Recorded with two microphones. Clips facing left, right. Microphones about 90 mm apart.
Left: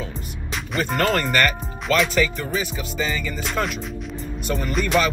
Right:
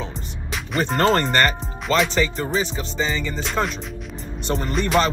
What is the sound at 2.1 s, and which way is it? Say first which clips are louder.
Music: right 1 dB; 30° right (ahead or behind).